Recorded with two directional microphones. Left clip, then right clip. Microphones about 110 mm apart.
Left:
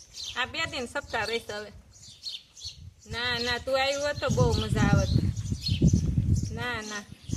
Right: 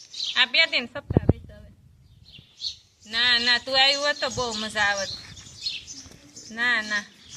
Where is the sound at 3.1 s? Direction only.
35° left (ahead or behind).